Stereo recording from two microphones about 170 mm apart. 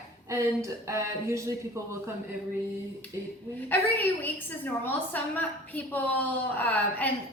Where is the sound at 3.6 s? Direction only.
10° left (ahead or behind).